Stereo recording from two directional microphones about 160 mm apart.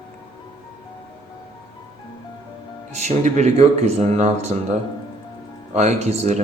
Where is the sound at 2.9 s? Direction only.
45° right (ahead or behind).